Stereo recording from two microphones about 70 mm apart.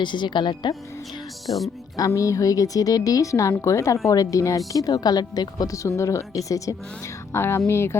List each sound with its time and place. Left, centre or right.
0.0 s speech: left
2.0 s speech: left
4.0 s speech: left
7.3 s speech: left